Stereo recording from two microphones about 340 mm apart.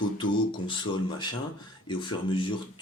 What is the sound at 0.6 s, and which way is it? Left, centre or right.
Speech, centre.